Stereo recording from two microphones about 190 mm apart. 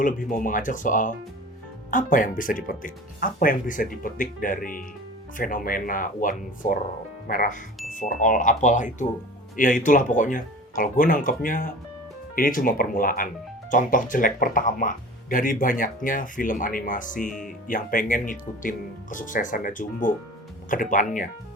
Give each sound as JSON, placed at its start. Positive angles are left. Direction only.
{"t": 0.0, "sound": "speech", "side_deg": 45}